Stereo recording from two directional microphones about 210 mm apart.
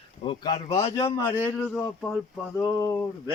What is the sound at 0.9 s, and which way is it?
A man's voice, 15° left (ahead or behind).